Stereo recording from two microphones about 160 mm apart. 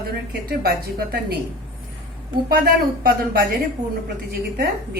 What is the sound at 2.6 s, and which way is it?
Speech, 70° right (ahead or behind).